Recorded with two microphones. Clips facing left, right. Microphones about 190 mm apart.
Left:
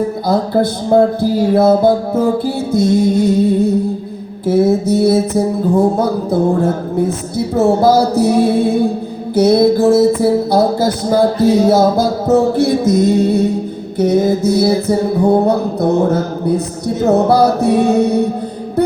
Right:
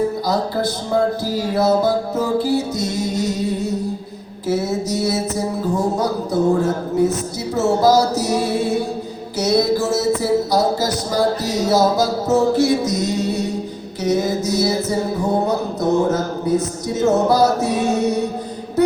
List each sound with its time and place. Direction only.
0.3 s music: 55° left (ahead or behind)